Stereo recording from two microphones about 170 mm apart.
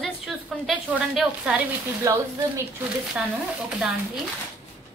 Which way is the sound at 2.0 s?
20° right (ahead or behind).